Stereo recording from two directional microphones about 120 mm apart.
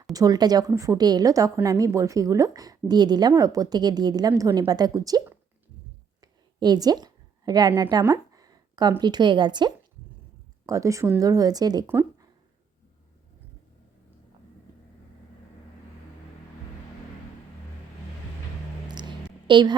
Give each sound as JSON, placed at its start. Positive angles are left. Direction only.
{"t": 0.0, "sound": "a woman's voice", "side_deg": -30}
{"t": 6.6, "sound": "a woman's voice", "side_deg": -35}
{"t": 8.0, "sound": "a sound", "side_deg": -25}
{"t": 9.0, "sound": "a woman's voice", "side_deg": -35}
{"t": 10.7, "sound": "a woman's voice", "side_deg": -25}
{"t": 18.9, "sound": "a sound", "side_deg": -40}